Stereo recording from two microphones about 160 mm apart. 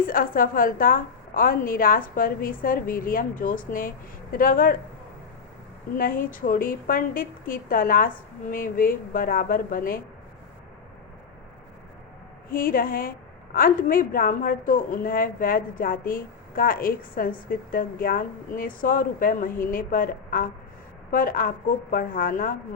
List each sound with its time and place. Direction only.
0.0 s a woman's voice: 60° left (ahead or behind)
6.0 s a woman's voice: 60° left (ahead or behind)
12.5 s a woman's voice: 65° left (ahead or behind)